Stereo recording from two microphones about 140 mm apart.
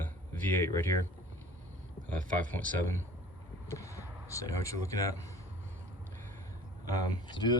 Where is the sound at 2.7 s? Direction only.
15° left (ahead or behind).